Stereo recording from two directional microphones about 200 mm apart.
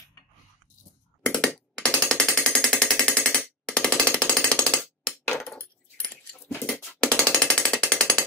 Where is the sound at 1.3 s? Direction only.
5° left (ahead or behind).